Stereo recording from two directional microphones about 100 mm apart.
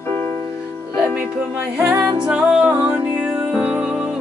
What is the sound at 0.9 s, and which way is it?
Music, 10° right (ahead or behind).